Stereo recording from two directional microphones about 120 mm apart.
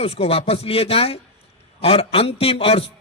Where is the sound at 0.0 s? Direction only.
55° left (ahead or behind).